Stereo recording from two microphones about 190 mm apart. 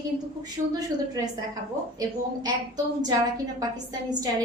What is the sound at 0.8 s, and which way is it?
A woman's voice, 20° right (ahead or behind).